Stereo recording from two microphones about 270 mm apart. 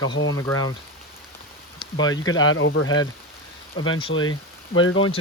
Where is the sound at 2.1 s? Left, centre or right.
Left.